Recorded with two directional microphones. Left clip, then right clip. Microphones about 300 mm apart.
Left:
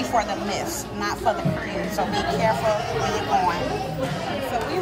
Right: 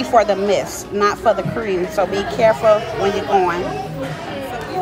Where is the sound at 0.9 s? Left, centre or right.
Centre.